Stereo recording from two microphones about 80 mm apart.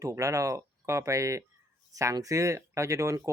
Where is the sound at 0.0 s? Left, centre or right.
Right.